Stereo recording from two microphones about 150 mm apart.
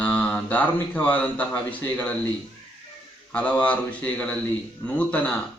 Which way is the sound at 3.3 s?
10° left (ahead or behind).